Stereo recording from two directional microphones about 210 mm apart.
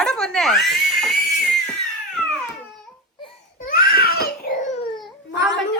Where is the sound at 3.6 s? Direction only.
45° left (ahead or behind).